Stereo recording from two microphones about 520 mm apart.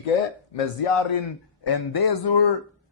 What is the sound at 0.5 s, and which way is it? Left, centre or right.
Speech, left.